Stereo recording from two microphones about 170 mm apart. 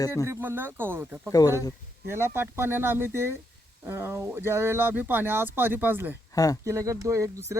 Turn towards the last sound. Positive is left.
turn(degrees=-20)  # may be behind; listen again after turning